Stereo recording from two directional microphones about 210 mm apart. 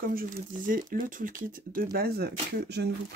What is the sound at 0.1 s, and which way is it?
Speech, 40° right (ahead or behind).